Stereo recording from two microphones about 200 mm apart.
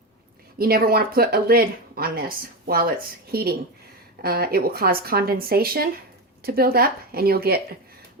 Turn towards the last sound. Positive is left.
turn(degrees=-50)  # may be behind; listen again after turning